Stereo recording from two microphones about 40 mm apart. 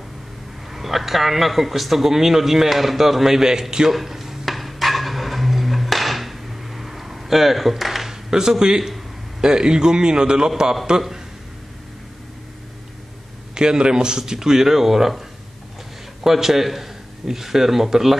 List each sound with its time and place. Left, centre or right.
0.7 s a man's voice: centre
3.9 s dishes: centre
9.4 s a man's voice: centre
13.6 s a man's voice: centre
16.3 s a man's voice: centre